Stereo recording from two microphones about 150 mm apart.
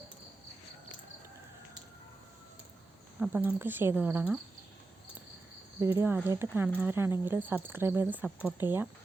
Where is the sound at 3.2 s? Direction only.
10° right (ahead or behind).